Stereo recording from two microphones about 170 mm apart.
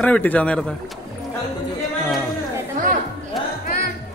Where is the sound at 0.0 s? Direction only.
10° left (ahead or behind).